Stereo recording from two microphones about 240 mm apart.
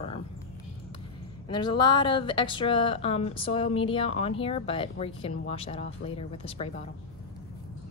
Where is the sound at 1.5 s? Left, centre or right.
Centre.